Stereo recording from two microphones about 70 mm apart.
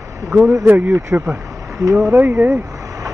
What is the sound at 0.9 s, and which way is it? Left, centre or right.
Speech, right.